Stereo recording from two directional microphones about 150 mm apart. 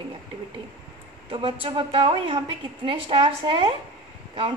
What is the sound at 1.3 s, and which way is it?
A woman's voice, 35° right (ahead or behind).